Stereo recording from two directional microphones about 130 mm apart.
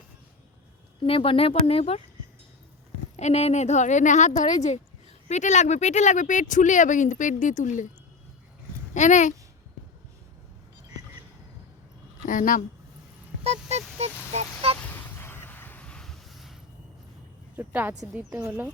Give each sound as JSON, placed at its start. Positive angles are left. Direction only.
{"t": 1.0, "sound": "speech", "side_deg": 45}
{"t": 3.2, "sound": "a woman's voice", "side_deg": 55}
{"t": 9.0, "sound": "speech", "side_deg": 70}
{"t": 12.2, "sound": "speech", "side_deg": 90}
{"t": 13.4, "sound": "a sound", "side_deg": -55}
{"t": 14.8, "sound": "a sound", "side_deg": 15}
{"t": 17.6, "sound": "a woman's voice", "side_deg": -15}